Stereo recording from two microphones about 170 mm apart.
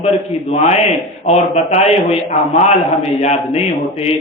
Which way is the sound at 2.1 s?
35° left (ahead or behind).